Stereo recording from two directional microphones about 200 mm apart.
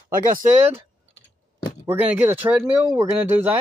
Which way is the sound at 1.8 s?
10° right (ahead or behind).